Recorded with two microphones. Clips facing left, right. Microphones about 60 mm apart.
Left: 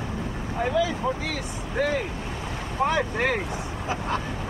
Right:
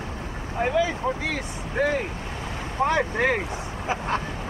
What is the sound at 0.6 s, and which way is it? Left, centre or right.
Speech, right.